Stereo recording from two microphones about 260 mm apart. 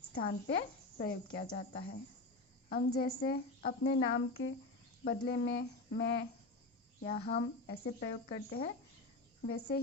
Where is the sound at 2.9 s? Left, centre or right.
Left.